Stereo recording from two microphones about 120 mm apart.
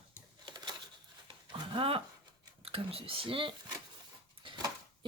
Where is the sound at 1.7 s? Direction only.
50° right (ahead or behind).